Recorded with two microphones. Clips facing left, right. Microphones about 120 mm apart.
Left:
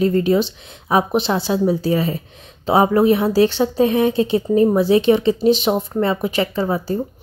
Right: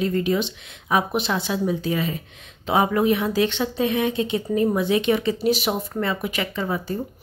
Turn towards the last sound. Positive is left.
turn(degrees=30)  # may be behind; listen again after turning